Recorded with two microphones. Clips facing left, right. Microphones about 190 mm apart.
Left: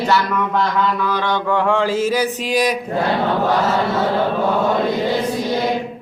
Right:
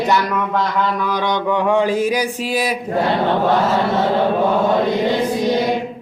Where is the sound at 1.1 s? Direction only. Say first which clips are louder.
Right 1 dB; 15° right (ahead or behind).